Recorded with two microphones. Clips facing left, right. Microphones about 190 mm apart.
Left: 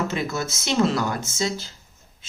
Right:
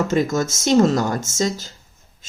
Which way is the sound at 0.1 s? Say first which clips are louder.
Right 8 dB; 45° right (ahead or behind).